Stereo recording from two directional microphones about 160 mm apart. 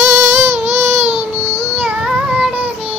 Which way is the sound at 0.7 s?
15° right (ahead or behind).